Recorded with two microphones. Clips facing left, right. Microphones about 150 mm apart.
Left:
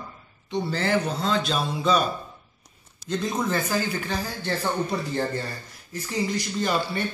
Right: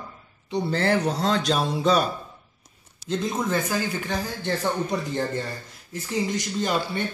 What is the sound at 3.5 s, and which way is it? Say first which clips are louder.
Speech: even; 15° right (ahead or behind).